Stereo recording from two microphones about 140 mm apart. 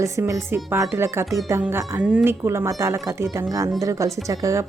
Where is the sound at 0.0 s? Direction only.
20° right (ahead or behind).